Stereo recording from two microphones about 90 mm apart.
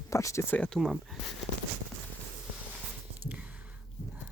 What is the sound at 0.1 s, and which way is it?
Speech, 35° left (ahead or behind).